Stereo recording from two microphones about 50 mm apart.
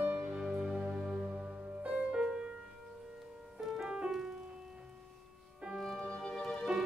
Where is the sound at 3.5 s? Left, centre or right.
Centre.